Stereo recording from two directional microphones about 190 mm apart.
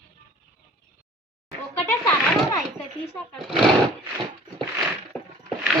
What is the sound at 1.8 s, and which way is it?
Speech, 10° left (ahead or behind).